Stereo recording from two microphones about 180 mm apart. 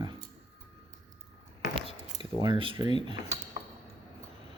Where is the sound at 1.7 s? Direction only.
25° right (ahead or behind).